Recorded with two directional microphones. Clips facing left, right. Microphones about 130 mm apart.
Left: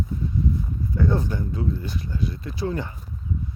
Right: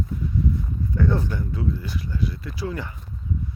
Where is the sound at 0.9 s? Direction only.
15° left (ahead or behind).